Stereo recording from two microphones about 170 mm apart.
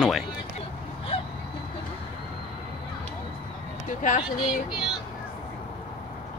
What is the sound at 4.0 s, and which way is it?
Speech, 45° left (ahead or behind).